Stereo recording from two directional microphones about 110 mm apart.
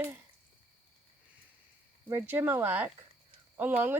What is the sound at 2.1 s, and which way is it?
Speech, 20° right (ahead or behind).